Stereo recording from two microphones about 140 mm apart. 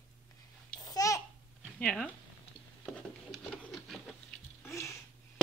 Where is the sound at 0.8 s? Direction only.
25° left (ahead or behind).